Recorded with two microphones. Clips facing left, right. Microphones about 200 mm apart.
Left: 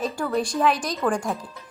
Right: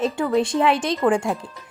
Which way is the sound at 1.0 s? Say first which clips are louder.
Right 4 dB; 10° right (ahead or behind).